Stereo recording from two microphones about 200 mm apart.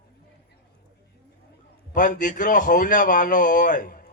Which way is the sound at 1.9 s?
40° left (ahead or behind).